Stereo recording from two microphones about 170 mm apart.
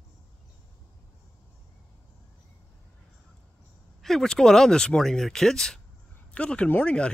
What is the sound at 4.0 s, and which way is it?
Speech, centre (ahead or behind).